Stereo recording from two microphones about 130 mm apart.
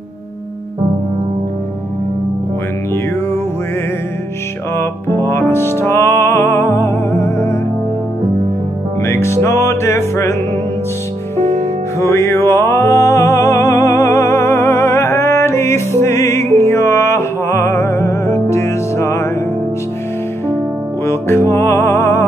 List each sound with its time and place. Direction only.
4.7 s music: 20° left (ahead or behind)
9.0 s music: 20° left (ahead or behind)
12.0 s music: 20° left (ahead or behind)
21.0 s music: 20° left (ahead or behind)